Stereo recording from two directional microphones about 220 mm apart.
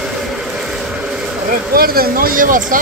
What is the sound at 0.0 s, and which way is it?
Vehicle, centre (ahead or behind).